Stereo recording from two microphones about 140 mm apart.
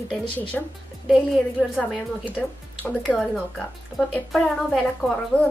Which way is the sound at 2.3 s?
10° left (ahead or behind).